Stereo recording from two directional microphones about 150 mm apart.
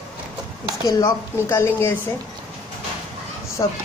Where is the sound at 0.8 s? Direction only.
20° left (ahead or behind).